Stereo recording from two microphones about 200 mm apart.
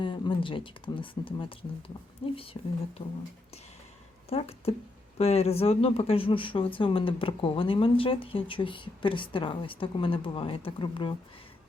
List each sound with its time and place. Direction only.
0.0 s speech: 25° left (ahead or behind)
4.3 s speech: 30° left (ahead or behind)